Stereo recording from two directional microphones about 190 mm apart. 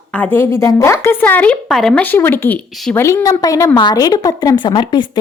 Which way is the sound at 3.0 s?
15° left (ahead or behind).